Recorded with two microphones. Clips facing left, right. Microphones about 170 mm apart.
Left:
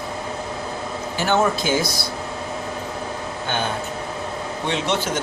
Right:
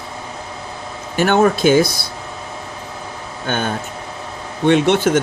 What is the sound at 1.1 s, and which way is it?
Speech, 60° right (ahead or behind).